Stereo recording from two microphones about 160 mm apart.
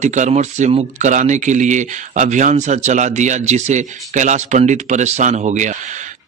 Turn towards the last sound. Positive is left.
turn(degrees=-50)  # may be behind; listen again after turning